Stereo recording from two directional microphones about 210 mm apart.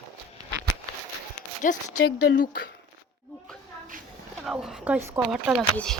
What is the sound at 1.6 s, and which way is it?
Speech, 35° left (ahead or behind).